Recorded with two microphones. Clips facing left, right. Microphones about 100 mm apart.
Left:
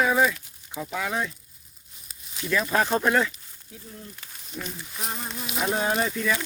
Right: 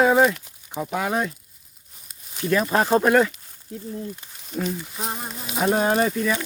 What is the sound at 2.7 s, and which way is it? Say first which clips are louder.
Speech: right 4 dB; 25° right (ahead or behind).